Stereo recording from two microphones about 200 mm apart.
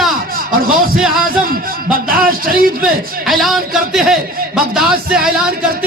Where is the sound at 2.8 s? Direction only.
Centre (ahead or behind).